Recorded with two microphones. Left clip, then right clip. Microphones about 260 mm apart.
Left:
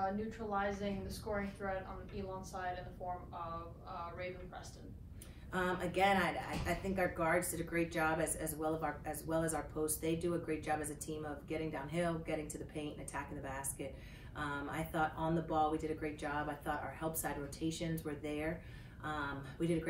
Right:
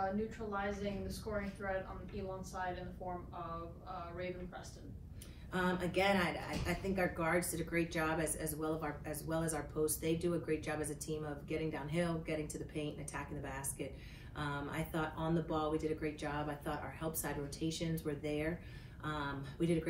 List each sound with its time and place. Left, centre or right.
0.0 s speech: left
2.5 s speech: left
5.5 s speech: centre